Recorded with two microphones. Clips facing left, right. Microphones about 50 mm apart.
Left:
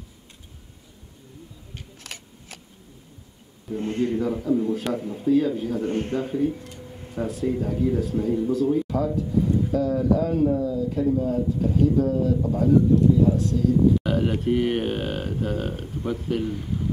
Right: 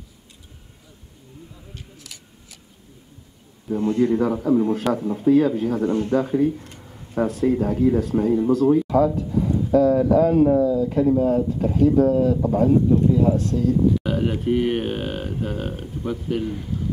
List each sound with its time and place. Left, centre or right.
2.1 s scissors: left
3.8 s speech: left
4.1 s a man's voice: right
5.9 s speech: left
6.2 s speech: right
14.0 s speech: centre